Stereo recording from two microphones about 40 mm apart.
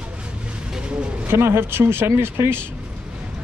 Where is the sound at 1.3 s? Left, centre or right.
Right.